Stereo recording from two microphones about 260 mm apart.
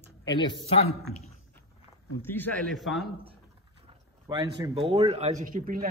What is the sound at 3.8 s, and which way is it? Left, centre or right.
Speech, centre.